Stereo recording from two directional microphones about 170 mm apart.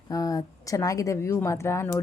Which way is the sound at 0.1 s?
20° left (ahead or behind).